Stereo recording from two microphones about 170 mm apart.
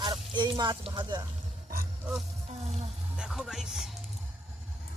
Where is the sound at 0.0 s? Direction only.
25° right (ahead or behind).